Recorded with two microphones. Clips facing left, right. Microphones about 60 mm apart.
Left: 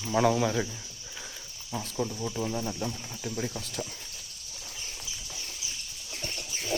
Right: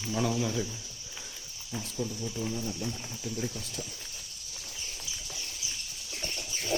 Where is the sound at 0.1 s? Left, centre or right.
Left.